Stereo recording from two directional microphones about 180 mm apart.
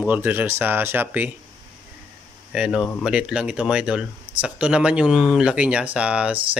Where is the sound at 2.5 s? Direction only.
5° right (ahead or behind).